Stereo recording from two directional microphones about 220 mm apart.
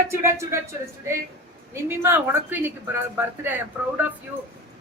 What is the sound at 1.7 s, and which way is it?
Speech, 10° right (ahead or behind).